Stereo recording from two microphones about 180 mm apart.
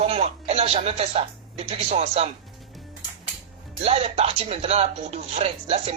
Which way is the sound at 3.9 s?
35° right (ahead or behind).